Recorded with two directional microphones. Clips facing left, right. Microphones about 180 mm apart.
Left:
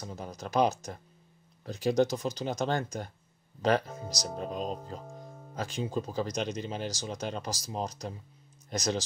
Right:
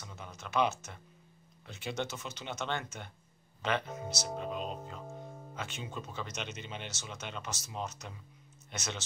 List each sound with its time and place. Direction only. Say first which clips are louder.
0.0 s speech: left 8 dB; 35° left (ahead or behind)